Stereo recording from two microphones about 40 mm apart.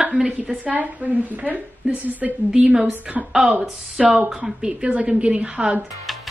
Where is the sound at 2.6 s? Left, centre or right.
Right.